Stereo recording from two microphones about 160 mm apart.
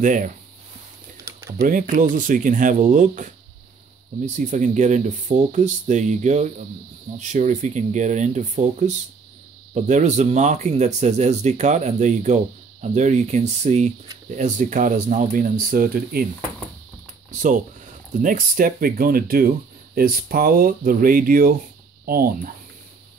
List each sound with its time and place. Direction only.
0.0 s speech: 55° right (ahead or behind)
1.3 s a sound: 20° right (ahead or behind)
1.6 s speech: 55° right (ahead or behind)
17.3 s speech: 55° right (ahead or behind)